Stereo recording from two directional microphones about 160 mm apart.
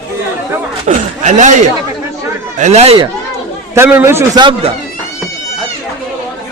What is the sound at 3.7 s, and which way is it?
Speech, 15° right (ahead or behind).